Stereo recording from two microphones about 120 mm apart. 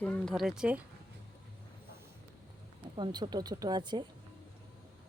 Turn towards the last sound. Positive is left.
turn(degrees=-35)  # may be behind; listen again after turning